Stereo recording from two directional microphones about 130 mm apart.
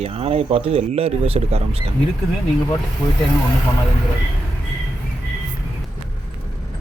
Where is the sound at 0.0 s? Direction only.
50° right (ahead or behind).